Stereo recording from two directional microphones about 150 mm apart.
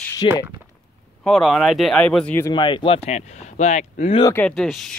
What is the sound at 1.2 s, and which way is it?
Speech, centre (ahead or behind).